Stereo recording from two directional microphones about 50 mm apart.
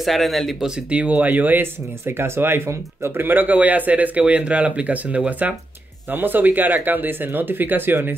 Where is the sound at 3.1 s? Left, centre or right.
Right.